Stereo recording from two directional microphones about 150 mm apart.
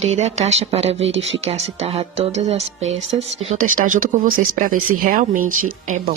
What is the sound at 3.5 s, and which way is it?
Speech, 60° right (ahead or behind).